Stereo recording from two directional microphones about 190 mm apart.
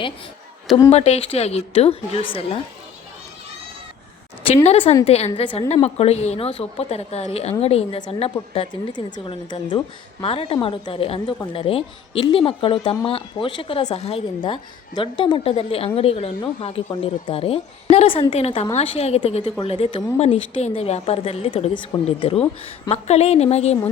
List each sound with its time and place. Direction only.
0.9 s speech: 35° left (ahead or behind)
4.4 s speech: 35° left (ahead or behind)